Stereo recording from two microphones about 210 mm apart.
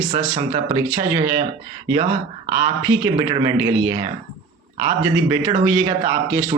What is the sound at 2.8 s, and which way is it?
A man's voice, 20° right (ahead or behind).